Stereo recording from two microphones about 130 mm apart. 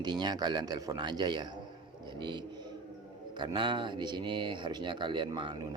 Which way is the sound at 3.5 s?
35° right (ahead or behind).